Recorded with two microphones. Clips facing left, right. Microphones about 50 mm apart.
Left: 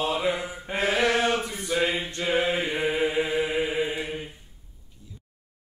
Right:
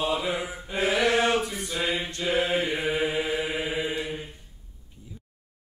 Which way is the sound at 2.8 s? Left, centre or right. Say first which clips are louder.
Left 2 dB; centre.